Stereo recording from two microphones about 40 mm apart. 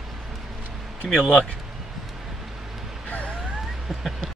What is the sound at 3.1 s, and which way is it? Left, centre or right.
Vehicle, left.